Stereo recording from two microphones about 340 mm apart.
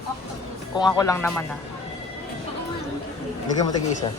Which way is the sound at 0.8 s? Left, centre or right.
Centre.